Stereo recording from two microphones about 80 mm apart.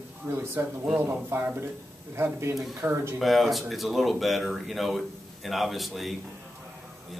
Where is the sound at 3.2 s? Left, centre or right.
Centre.